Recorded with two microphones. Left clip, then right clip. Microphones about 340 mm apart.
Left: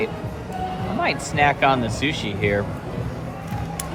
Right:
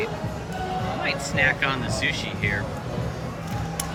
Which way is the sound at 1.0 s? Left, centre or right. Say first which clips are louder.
Left 4 dB; centre.